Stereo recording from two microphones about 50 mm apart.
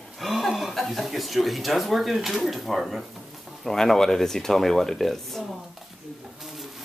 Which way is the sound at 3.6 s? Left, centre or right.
Centre.